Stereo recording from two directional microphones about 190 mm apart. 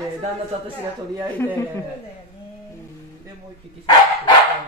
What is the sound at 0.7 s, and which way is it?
Speech, 20° right (ahead or behind).